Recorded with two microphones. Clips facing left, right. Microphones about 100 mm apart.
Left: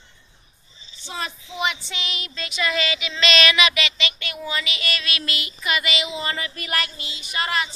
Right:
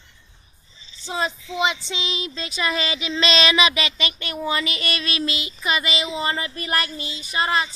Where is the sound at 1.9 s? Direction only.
25° right (ahead or behind).